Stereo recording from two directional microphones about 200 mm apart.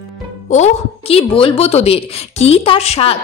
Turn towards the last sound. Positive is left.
turn(degrees=30)  # may be behind; listen again after turning